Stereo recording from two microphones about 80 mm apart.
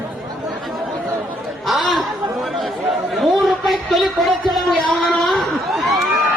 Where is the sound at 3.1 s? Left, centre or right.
Centre.